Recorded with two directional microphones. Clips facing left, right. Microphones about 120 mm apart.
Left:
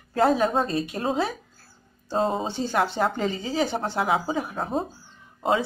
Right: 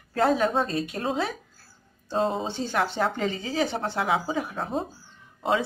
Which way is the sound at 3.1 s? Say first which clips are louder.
Left 1 dB; 35° left (ahead or behind).